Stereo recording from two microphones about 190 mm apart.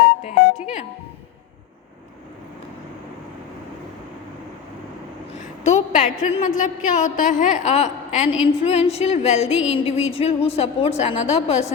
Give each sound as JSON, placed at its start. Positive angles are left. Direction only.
{"t": 0.0, "sound": "music", "side_deg": 35}
{"t": 5.6, "sound": "a woman's voice", "side_deg": 40}